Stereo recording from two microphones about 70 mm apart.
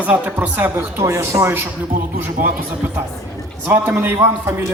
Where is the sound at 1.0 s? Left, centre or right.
Right.